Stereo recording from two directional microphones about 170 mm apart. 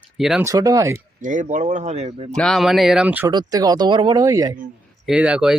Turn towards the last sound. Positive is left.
turn(degrees=-5)  # may be behind; listen again after turning